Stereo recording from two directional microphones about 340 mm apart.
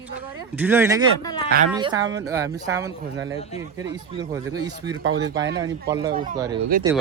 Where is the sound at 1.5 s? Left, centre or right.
Right.